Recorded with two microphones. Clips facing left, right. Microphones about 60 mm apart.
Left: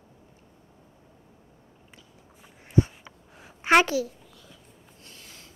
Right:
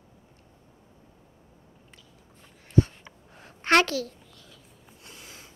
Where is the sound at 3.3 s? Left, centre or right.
Centre.